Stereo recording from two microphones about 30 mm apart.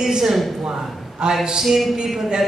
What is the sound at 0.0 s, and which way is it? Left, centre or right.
Speech, centre.